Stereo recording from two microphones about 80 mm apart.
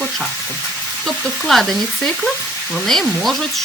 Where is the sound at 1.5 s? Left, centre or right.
Centre.